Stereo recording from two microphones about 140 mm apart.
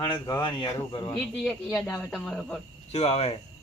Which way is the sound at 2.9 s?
45° left (ahead or behind).